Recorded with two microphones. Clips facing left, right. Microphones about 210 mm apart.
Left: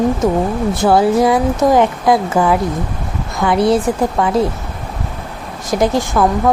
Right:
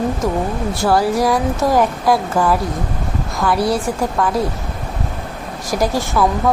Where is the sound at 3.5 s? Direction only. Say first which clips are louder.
Left 5 dB; 25° left (ahead or behind).